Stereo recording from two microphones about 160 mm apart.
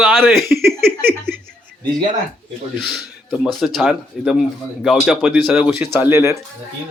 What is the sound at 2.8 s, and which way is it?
A man's voice, centre (ahead or behind).